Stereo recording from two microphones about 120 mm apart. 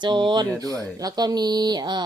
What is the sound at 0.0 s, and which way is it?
Speech, 40° right (ahead or behind).